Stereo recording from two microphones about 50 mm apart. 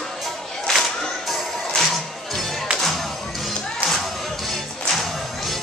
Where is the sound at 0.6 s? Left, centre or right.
Centre.